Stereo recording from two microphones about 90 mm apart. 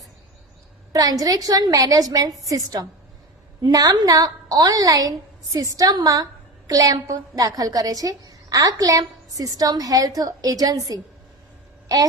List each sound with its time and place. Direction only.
0.9 s a woman's voice: 40° right (ahead or behind)